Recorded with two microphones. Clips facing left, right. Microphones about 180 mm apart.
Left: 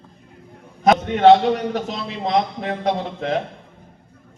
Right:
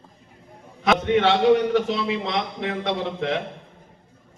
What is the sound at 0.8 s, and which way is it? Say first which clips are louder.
A man's voice: left 6 dB; 45° left (ahead or behind).